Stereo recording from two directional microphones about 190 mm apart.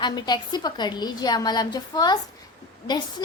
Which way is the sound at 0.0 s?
25° left (ahead or behind).